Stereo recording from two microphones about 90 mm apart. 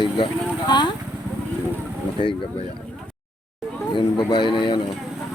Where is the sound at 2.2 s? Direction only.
65° left (ahead or behind).